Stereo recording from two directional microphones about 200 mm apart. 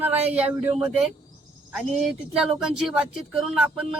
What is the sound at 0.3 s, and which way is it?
Speech, 5° right (ahead or behind).